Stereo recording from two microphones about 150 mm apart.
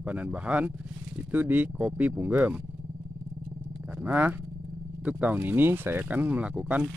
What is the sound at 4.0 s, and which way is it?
Speech, 10° right (ahead or behind).